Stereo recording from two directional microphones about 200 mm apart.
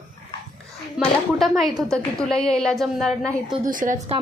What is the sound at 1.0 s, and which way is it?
A woman's voice, centre (ahead or behind).